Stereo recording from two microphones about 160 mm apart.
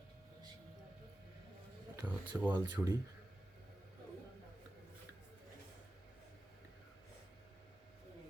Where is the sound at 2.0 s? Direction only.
15° right (ahead or behind).